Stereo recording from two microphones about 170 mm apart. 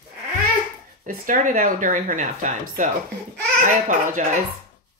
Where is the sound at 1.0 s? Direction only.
50° right (ahead or behind).